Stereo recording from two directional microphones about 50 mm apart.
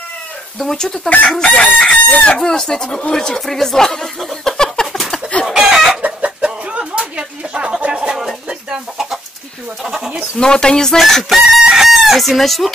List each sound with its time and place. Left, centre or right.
0.6 s speech: centre
1.4 s chicken: left
2.2 s speech: centre
4.2 s a sound: centre
5.5 s chicken: centre
6.0 s a sound: right
7.9 s bird: centre
9.8 s speech: centre
10.3 s speech: centre
11.0 s chicken: centre